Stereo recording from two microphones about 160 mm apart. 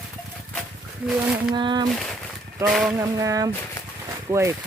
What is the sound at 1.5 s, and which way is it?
Speech, 30° right (ahead or behind).